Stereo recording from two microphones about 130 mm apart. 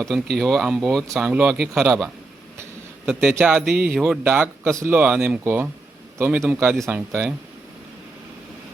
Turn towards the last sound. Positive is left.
turn(degrees=-15)  # may be behind; listen again after turning